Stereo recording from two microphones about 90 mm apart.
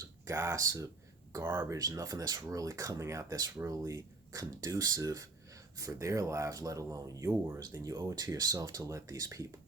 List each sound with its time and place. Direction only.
0.3 s speech: 30° right (ahead or behind)
1.4 s speech: 25° right (ahead or behind)
1.7 s speech: 40° right (ahead or behind)
7.7 s speech: 40° right (ahead or behind)